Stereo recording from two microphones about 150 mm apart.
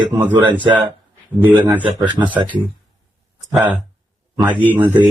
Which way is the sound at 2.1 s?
30° right (ahead or behind).